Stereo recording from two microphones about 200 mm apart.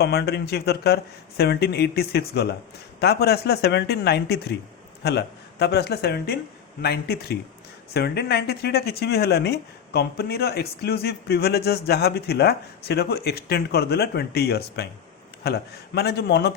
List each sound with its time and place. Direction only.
0.0 s speech: 55° left (ahead or behind)